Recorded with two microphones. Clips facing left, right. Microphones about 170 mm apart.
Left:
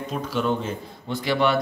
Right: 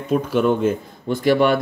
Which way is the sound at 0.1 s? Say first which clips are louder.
Right 8 dB; 50° right (ahead or behind).